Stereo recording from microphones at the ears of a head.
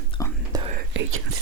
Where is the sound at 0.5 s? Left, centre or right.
Right.